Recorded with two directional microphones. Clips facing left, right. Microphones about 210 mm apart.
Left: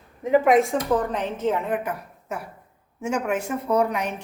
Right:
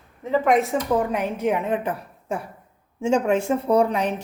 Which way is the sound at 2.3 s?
30° right (ahead or behind).